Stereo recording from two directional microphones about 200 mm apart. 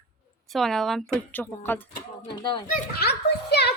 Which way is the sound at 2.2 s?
25° left (ahead or behind).